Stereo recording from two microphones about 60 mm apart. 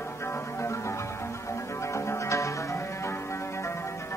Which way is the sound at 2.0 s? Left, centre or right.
Left.